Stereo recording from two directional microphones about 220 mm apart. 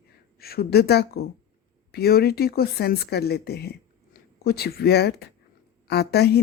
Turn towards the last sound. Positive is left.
turn(degrees=45)  # may be behind; listen again after turning